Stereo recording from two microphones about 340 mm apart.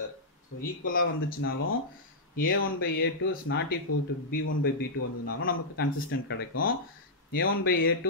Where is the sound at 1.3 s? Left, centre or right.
Left.